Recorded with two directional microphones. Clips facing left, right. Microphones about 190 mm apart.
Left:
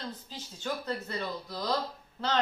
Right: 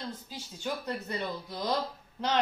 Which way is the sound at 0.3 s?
15° right (ahead or behind).